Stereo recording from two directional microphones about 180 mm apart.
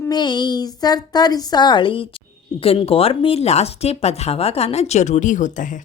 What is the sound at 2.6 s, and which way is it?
Speech, 30° left (ahead or behind).